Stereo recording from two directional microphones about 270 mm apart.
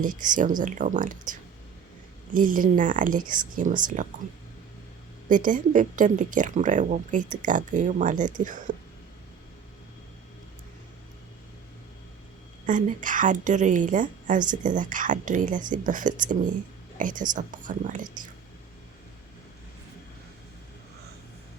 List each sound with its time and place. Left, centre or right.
0.0 s speech: right
5.3 s speech: right
12.6 s speech: right